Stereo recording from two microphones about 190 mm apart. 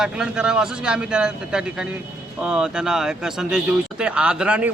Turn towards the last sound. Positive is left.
turn(degrees=-5)  # may be behind; listen again after turning